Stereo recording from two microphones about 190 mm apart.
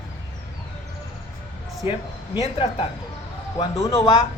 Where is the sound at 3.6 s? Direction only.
15° left (ahead or behind).